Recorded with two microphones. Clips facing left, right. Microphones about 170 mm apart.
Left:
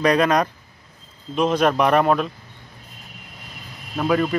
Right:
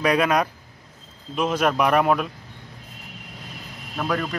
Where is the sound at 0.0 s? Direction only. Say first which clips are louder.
Left 2 dB; 5° right (ahead or behind).